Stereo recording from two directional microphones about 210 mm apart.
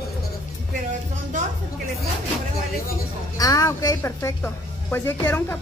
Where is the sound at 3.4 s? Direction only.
15° left (ahead or behind).